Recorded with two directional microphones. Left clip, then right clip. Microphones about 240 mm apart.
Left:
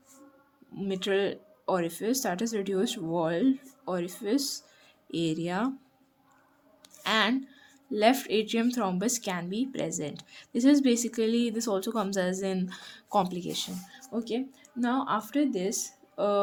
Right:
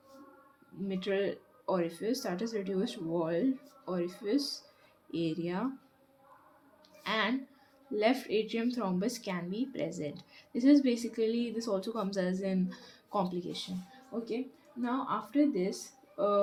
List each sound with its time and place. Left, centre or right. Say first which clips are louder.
0.9 s a woman's voice: left 5 dB; left
4.4 s speech: left 3 dB; left
5.1 s speech: left 5 dB; left
7.0 s squish: left 6 dB; left
7.9 s a woman's voice: left 5 dB; left